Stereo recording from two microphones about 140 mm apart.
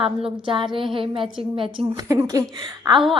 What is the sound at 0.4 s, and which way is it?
Speech, 35° right (ahead or behind).